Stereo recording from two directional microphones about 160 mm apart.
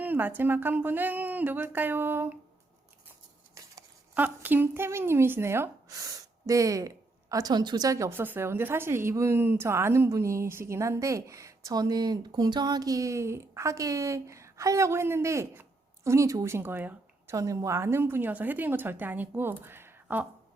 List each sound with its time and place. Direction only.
0.0 s a woman's voice: 10° right (ahead or behind)
3.5 s a woman's voice: 15° right (ahead or behind)